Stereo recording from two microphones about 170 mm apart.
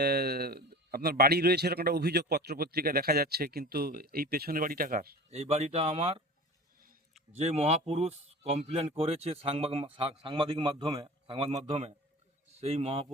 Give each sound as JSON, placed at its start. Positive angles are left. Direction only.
{"t": 0.0, "sound": "a man's voice", "side_deg": -70}
{"t": 5.3, "sound": "speech", "side_deg": -40}
{"t": 7.3, "sound": "speech", "side_deg": -40}